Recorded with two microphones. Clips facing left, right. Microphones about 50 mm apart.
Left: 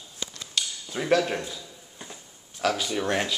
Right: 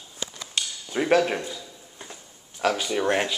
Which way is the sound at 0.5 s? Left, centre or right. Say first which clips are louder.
Right 3 dB; centre.